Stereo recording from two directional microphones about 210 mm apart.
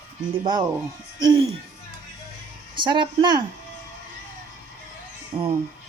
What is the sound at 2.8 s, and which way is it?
Speech, 20° right (ahead or behind).